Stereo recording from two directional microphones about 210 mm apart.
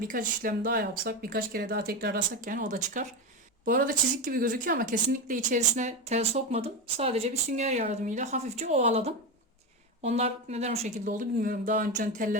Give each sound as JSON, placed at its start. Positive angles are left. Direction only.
{"t": 0.0, "sound": "speech", "side_deg": -40}